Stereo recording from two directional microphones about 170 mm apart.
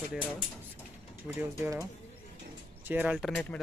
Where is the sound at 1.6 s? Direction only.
20° right (ahead or behind).